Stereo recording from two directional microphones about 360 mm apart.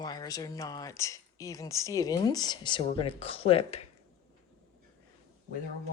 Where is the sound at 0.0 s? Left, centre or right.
Centre.